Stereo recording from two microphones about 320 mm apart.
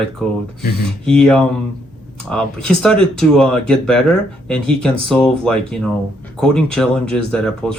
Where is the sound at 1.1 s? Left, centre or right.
Centre.